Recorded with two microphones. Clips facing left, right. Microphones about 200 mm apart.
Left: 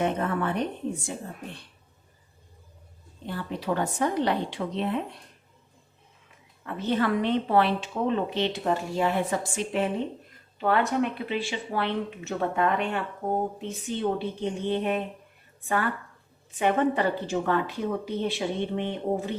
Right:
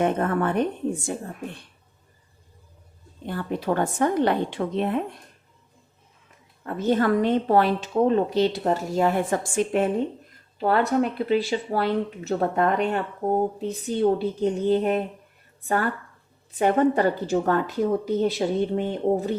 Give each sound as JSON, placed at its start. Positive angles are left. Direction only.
{"t": 0.0, "sound": "a woman's voice", "side_deg": -50}
{"t": 3.2, "sound": "a woman's voice", "side_deg": -50}
{"t": 6.7, "sound": "a woman's voice", "side_deg": -45}
{"t": 10.6, "sound": "speech", "side_deg": -35}